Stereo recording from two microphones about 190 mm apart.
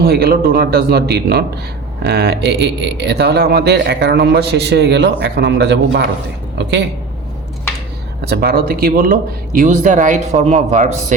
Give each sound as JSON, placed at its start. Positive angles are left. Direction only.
{"t": 0.0, "sound": "speech", "side_deg": -55}
{"t": 8.2, "sound": "speech", "side_deg": -55}